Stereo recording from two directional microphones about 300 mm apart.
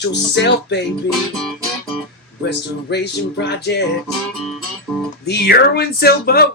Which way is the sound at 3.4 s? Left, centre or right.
Left.